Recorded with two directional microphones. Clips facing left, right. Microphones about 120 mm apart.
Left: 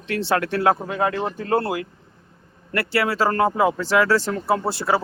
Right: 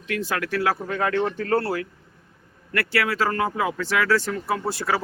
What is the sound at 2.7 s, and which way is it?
Speech, 30° left (ahead or behind).